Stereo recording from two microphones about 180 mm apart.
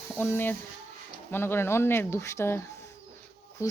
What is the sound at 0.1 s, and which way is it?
Speech, 10° left (ahead or behind).